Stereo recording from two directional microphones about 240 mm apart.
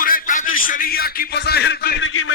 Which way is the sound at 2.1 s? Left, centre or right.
Left.